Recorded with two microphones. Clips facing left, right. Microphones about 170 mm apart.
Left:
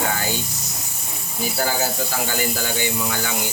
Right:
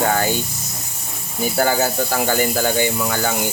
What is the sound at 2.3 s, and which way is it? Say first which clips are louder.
Speech: right 6 dB; 50° right (ahead or behind).